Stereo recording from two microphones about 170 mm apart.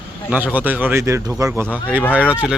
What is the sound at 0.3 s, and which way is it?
A man's voice, 10° right (ahead or behind).